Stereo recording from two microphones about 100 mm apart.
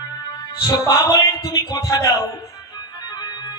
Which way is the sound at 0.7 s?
30° left (ahead or behind).